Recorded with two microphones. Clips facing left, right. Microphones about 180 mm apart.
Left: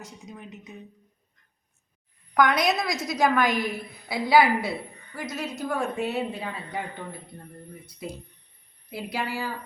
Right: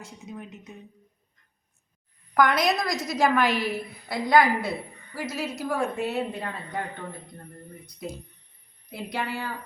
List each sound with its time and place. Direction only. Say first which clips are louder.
0.0 s speech: right 2 dB; centre (ahead or behind)
2.3 s speech: even; centre (ahead or behind)
8.9 s speech: even; 5° left (ahead or behind)